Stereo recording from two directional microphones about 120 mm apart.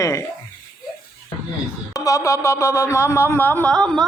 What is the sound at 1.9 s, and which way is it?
Speech, 30° left (ahead or behind).